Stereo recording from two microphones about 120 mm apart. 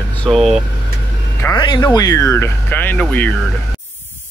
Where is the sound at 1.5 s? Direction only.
35° left (ahead or behind); by 3.3 s 15° left (ahead or behind).